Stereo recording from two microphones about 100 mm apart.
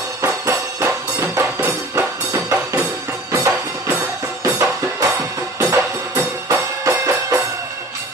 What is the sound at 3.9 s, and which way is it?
Music, 10° right (ahead or behind).